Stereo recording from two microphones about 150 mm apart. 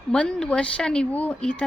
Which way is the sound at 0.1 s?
5° left (ahead or behind).